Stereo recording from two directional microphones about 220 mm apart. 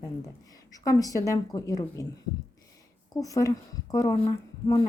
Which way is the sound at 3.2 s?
15° left (ahead or behind).